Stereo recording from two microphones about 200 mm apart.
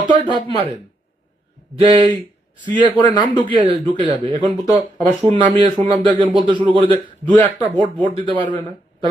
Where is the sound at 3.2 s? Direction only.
25° left (ahead or behind).